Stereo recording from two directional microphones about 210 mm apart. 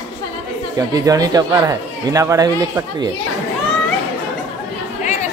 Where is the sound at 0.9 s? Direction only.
15° right (ahead or behind).